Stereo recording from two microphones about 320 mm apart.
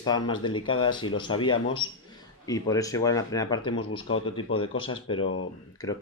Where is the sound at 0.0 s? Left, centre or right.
Centre.